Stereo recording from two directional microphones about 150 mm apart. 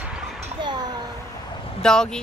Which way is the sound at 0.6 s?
30° right (ahead or behind).